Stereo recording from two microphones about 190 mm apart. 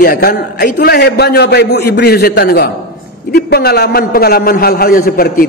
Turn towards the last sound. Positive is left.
turn(degrees=50)  # may be behind; listen again after turning